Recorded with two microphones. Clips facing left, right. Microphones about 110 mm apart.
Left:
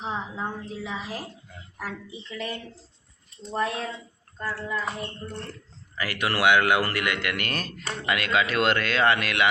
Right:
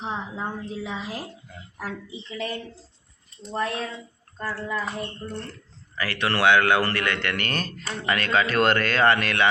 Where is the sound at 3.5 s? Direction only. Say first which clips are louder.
Even; 5° left (ahead or behind).